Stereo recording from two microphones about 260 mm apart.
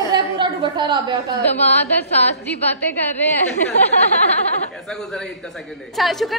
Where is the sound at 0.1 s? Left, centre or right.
Centre.